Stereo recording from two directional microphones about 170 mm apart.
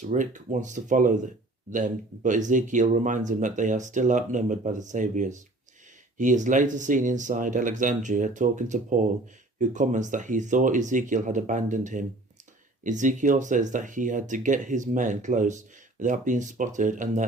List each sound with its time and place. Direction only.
0.0 s speech: 45° right (ahead or behind)